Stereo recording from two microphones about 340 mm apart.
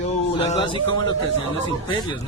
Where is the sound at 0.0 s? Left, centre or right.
Centre.